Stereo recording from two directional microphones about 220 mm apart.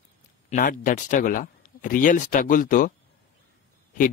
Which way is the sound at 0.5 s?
35° left (ahead or behind).